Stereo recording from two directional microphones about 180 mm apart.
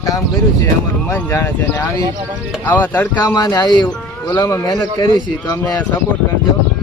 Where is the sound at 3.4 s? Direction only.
20° left (ahead or behind).